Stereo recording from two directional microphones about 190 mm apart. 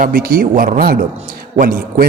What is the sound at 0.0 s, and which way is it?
A man's voice, 45° right (ahead or behind).